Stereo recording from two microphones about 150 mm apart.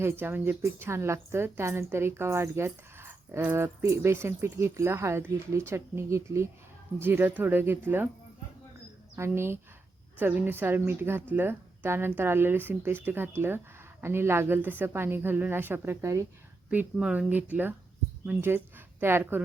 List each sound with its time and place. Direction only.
0.0 s a woman's voice: 15° right (ahead or behind)
9.1 s a woman's voice: 15° right (ahead or behind)